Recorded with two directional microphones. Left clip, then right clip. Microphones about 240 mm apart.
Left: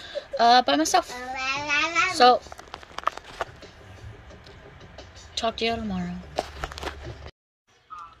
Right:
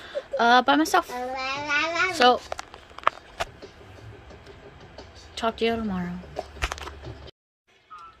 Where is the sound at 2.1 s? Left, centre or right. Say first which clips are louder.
Left 2 dB; centre.